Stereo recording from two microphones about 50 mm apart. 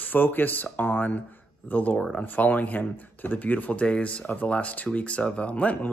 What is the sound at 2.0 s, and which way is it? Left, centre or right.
Speech, centre.